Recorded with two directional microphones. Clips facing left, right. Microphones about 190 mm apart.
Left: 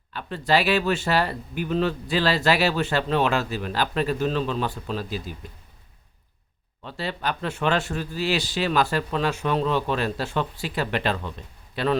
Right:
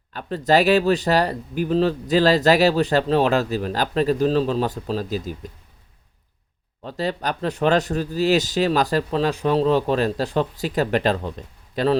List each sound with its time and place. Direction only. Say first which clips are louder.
0.1 s speech: right 4 dB; 40° right (ahead or behind)
6.8 s speech: right 4 dB; 40° right (ahead or behind)